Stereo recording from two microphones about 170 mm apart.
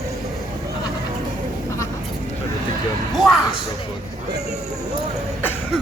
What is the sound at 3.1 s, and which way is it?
Speech, centre (ahead or behind).